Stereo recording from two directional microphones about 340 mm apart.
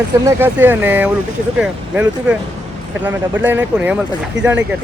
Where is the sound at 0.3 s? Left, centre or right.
Centre.